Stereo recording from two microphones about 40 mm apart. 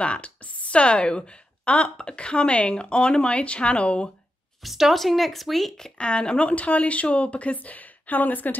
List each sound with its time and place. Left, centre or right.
0.0 s a woman's voice: left
4.6 s speech: centre
5.9 s speech: left